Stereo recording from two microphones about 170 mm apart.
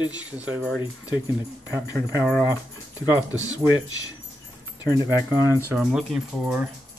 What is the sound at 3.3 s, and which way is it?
Speech, 20° left (ahead or behind).